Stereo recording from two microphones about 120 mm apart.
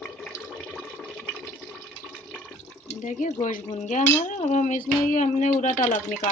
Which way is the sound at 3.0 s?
90° left.